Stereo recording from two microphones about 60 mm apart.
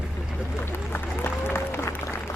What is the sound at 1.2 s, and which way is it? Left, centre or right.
Applause, left.